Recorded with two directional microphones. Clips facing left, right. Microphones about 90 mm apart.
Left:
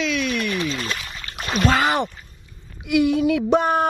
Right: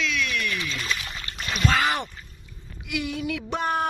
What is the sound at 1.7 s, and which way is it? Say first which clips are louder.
Speech: left 4 dB; 25° left (ahead or behind).